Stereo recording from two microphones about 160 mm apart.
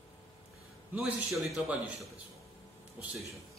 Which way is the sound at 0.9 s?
Centre (ahead or behind).